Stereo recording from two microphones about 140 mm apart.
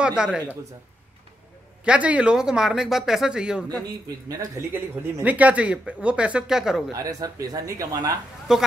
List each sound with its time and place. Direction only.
0.0 s speech: 5° right (ahead or behind)
1.9 s speech: 10° right (ahead or behind)
4.3 s speech: 25° right (ahead or behind); by 6.8 s 5° right (ahead or behind)
6.9 s speech: 25° right (ahead or behind)
8.5 s speech: 5° right (ahead or behind)